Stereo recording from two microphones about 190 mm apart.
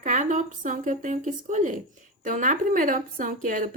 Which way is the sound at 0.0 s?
40° right (ahead or behind).